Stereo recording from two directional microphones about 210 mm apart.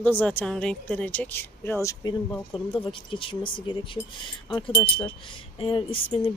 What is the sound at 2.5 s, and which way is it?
Wind chime, 25° left (ahead or behind).